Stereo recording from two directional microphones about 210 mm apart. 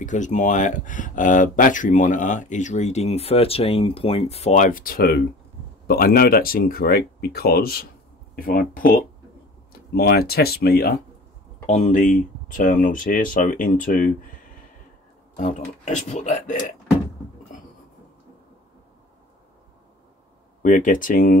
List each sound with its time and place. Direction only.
0.0 s speech: 35° left (ahead or behind)
15.3 s speech: 35° left (ahead or behind)
20.6 s speech: 40° left (ahead or behind)